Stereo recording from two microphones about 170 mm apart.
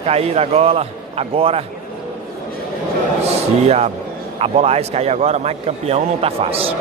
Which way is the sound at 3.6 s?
40° right (ahead or behind).